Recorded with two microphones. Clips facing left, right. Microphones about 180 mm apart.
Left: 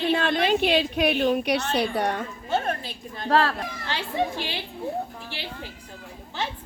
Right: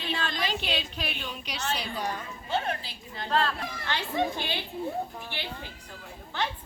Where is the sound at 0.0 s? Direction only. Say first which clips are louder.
Left 9 dB; 55° left (ahead or behind).